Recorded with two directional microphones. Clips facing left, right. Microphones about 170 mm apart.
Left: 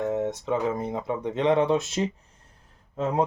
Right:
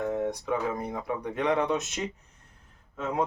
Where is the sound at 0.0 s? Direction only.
20° left (ahead or behind).